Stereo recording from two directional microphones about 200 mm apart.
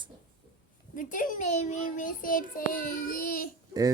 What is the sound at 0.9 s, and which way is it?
A child's voice, 40° left (ahead or behind).